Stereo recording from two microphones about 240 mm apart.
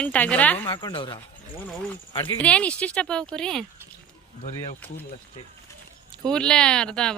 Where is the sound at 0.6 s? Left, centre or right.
Left.